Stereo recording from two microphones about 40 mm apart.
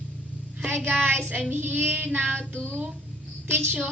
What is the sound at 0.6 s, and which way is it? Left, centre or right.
Child singing, right.